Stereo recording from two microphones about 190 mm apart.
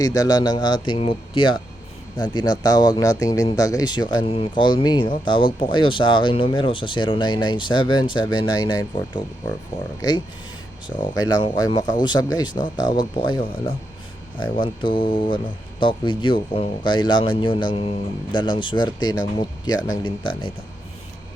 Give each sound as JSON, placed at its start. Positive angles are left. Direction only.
{"t": 0.0, "sound": "speech", "side_deg": 20}
{"t": 10.8, "sound": "speech", "side_deg": 25}